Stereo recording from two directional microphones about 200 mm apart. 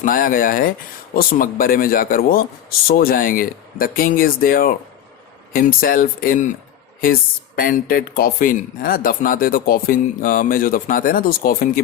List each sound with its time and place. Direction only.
0.0 s speech: 45° left (ahead or behind)